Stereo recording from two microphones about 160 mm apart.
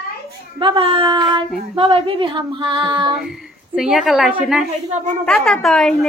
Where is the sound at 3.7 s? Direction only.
Centre (ahead or behind).